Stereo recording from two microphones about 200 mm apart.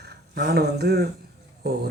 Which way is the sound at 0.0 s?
55° right (ahead or behind).